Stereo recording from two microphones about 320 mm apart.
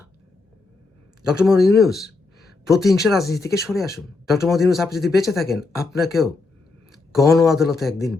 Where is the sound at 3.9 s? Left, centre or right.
Centre.